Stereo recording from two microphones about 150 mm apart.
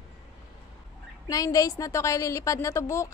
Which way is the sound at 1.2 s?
25° left (ahead or behind).